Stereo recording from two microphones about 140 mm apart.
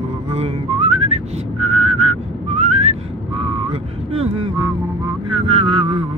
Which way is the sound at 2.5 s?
55° right (ahead or behind).